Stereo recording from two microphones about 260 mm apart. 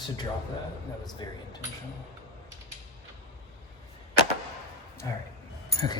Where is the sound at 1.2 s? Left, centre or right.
Centre.